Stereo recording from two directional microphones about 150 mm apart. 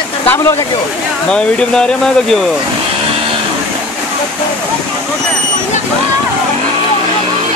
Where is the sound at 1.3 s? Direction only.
5° left (ahead or behind).